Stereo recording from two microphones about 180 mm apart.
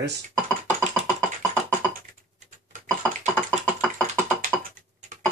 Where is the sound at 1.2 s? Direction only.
10° left (ahead or behind).